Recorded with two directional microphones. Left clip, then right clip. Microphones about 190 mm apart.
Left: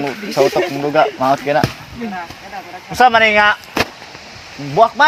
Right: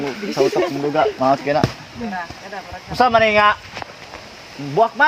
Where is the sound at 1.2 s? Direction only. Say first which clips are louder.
Left 2 dB; centre (ahead or behind).